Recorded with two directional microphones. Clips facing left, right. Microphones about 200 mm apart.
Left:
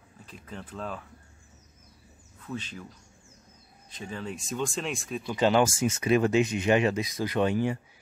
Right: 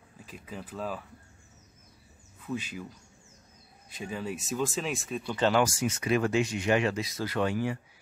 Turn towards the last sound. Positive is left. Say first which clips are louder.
# left 3 dB
turn(degrees=20)  # may be behind; listen again after turning